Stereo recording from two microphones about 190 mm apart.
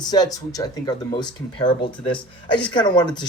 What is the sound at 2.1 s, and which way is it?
Speech, 5° left (ahead or behind).